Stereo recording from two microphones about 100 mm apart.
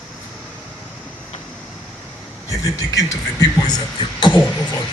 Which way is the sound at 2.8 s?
35° left (ahead or behind).